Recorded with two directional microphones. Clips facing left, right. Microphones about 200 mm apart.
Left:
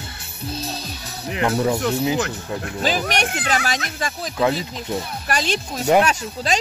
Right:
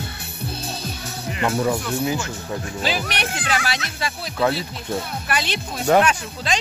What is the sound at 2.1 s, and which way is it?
Speech, 60° left (ahead or behind).